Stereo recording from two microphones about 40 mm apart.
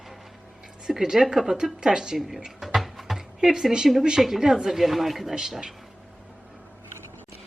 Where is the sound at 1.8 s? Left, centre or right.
Centre.